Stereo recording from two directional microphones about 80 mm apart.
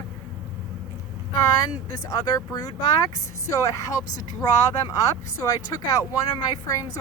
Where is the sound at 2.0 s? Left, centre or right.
Left.